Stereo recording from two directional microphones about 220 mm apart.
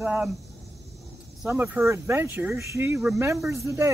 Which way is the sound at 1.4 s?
10° right (ahead or behind).